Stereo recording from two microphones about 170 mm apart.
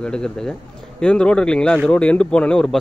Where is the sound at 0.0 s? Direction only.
5° left (ahead or behind).